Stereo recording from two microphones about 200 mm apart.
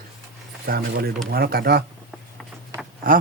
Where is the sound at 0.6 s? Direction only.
50° right (ahead or behind).